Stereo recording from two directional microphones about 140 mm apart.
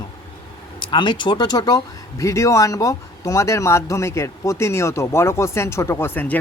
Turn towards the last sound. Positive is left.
turn(degrees=10)  # may be behind; listen again after turning